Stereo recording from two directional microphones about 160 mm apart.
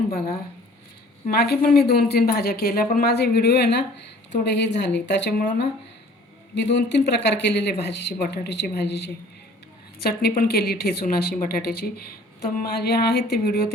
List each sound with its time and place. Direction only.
1.3 s a woman's voice: 75° left (ahead or behind)
10.0 s speech: 75° left (ahead or behind)
12.4 s speech: 90° left